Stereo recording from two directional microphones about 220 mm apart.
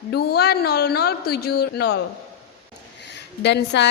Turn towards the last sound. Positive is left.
turn(degrees=50)  # may be behind; listen again after turning